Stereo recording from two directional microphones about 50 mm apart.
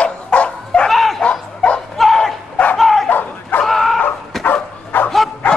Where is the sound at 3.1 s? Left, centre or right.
Left.